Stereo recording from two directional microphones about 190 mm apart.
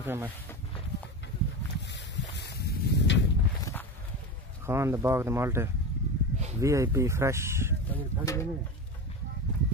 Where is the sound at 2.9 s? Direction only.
70° left (ahead or behind).